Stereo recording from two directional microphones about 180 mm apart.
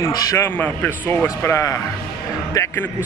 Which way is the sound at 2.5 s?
15° left (ahead or behind).